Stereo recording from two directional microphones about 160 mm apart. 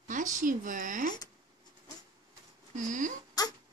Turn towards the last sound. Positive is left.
turn(degrees=25)  # may be behind; listen again after turning